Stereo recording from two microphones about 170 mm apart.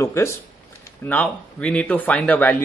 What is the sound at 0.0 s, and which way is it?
Speech, 15° left (ahead or behind).